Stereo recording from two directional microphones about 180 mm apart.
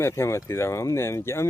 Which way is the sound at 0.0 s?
15° left (ahead or behind).